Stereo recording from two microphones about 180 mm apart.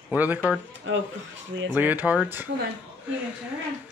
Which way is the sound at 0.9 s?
90° right.